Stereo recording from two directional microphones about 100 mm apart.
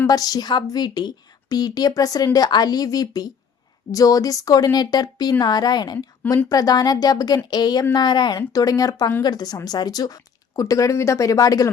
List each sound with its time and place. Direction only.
0.1 s a woman's voice: 40° left (ahead or behind)